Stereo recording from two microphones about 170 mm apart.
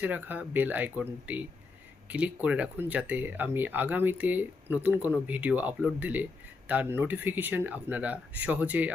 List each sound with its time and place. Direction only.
0.0 s speech: 10° right (ahead or behind)